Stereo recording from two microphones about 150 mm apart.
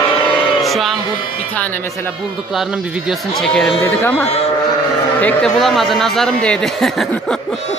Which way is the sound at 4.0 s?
15° left (ahead or behind).